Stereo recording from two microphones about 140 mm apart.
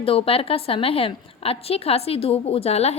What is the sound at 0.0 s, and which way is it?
A woman's voice, 40° left (ahead or behind).